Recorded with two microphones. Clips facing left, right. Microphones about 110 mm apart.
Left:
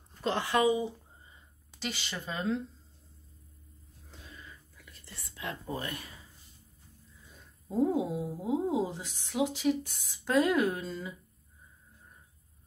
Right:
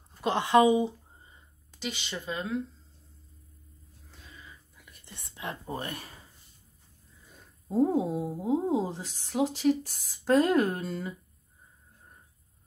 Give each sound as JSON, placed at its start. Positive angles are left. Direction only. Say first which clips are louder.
{"t": 0.1, "sound": "speech", "louder": "right 6 dB", "side_deg": -15}
{"t": 1.9, "sound": "speech", "louder": "right 2 dB", "side_deg": -20}
{"t": 4.7, "sound": "speech", "louder": "even", "side_deg": -20}
{"t": 7.7, "sound": "speech", "louder": "right 3 dB", "side_deg": -45}
{"t": 8.3, "sound": "speech", "louder": "right 3 dB", "side_deg": -35}